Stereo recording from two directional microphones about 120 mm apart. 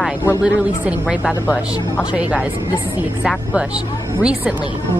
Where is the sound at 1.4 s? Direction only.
25° left (ahead or behind).